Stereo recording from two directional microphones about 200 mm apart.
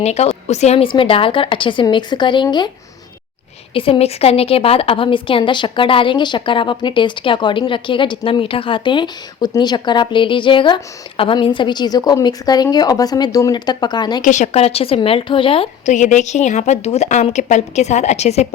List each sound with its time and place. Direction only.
0.0 s a woman's voice: 30° left (ahead or behind)
3.8 s a woman's voice: 30° left (ahead or behind)
14.3 s a woman's voice: 35° left (ahead or behind)